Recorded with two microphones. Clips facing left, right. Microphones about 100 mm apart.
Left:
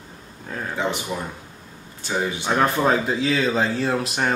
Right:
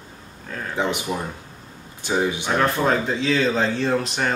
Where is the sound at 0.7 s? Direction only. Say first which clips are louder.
Right 2 dB; 15° right (ahead or behind).